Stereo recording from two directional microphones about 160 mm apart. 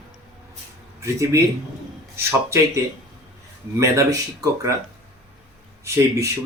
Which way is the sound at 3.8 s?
20° right (ahead or behind).